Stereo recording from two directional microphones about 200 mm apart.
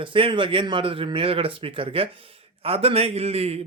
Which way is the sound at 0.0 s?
25° right (ahead or behind).